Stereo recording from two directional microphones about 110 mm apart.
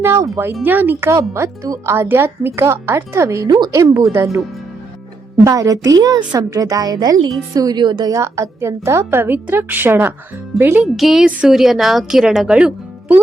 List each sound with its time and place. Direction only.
0.0 s a woman's voice: 25° right (ahead or behind)
5.5 s a woman's voice: 30° right (ahead or behind)
8.2 s a woman's voice: 25° right (ahead or behind)
10.8 s a woman's voice: centre (ahead or behind)